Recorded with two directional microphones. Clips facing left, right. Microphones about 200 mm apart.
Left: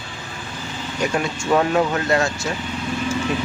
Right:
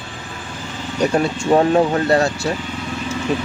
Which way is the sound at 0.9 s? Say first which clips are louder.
Right 5 dB; 35° right (ahead or behind).